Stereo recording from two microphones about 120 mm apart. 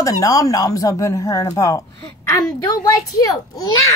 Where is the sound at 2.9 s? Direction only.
30° left (ahead or behind).